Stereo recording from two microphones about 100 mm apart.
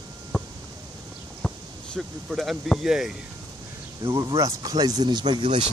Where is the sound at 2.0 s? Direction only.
Centre (ahead or behind).